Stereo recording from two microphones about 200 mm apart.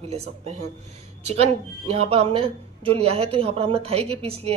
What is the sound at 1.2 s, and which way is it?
Speech, 30° right (ahead or behind).